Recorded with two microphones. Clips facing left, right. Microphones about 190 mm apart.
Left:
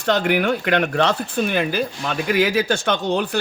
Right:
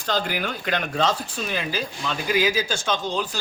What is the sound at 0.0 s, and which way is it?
Speech, 70° left (ahead or behind).